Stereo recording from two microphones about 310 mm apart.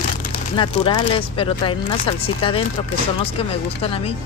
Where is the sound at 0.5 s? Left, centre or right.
Centre.